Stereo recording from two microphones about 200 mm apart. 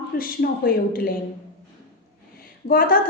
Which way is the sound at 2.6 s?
45° left (ahead or behind).